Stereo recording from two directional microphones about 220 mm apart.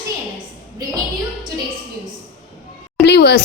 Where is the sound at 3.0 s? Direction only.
50° left (ahead or behind).